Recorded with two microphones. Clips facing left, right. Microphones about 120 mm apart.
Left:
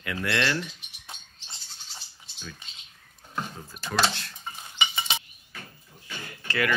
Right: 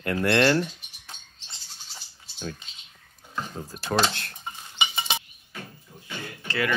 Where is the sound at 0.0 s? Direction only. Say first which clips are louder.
Right 7 dB; 45° right (ahead or behind).